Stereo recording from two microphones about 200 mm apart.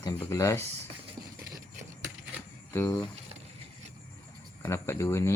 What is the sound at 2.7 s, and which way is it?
Speech, 15° left (ahead or behind).